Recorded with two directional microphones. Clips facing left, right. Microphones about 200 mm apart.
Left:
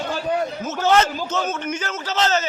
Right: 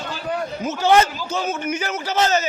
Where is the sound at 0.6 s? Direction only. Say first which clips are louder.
Right 3 dB; 15° right (ahead or behind).